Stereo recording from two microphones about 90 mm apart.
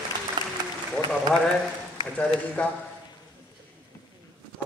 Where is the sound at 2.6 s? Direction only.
15° left (ahead or behind).